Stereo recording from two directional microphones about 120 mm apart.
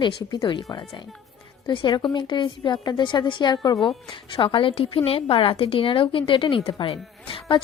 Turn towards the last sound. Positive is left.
turn(degrees=45)  # may be behind; listen again after turning